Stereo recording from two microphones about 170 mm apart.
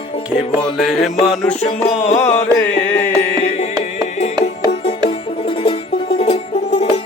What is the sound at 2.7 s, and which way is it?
Music, 90° left.